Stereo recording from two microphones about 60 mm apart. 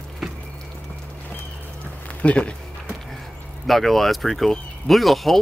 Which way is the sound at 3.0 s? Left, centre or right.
Centre.